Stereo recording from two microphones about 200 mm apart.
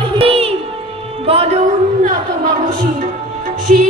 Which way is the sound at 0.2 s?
30° right (ahead or behind).